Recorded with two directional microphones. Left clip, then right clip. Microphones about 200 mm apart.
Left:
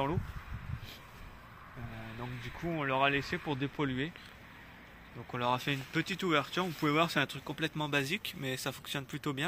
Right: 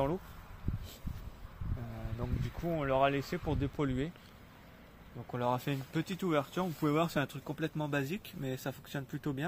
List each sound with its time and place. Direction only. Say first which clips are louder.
2.1 s speech: right 2 dB; 70° right (ahead or behind)
5.3 s speech: left 2 dB; 65° right (ahead or behind); by 9.4 s 40° right (ahead or behind)